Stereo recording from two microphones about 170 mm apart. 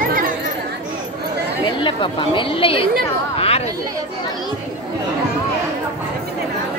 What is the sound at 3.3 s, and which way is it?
Chatter, 35° left (ahead or behind).